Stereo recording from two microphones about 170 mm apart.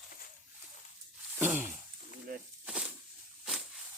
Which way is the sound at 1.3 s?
10° right (ahead or behind).